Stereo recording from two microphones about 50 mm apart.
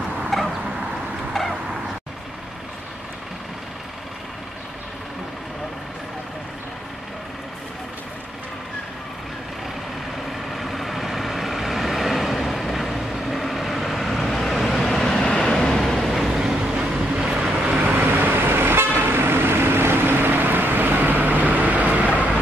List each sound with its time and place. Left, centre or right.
0.3 s a sound: centre
10.5 s vehicle: centre
17.6 s vehicle: right